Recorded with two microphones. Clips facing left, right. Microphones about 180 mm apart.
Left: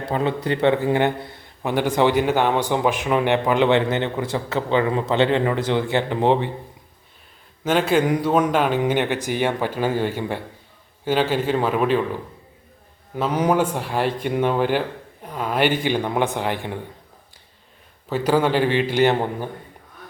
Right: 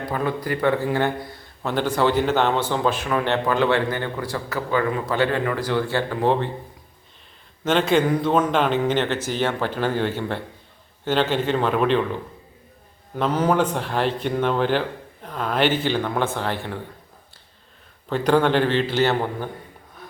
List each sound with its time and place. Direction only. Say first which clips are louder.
0.0 s a man's voice: left 2 dB; 25° left (ahead or behind)
7.6 s speech: even; 10° left (ahead or behind)
18.1 s speech: right 1 dB; 5° left (ahead or behind)